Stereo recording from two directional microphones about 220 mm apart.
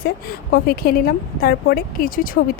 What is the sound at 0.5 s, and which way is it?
Speech, 45° left (ahead or behind).